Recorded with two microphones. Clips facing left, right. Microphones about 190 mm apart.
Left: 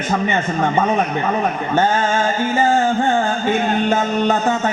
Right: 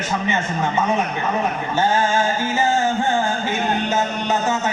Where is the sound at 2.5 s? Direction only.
55° left (ahead or behind).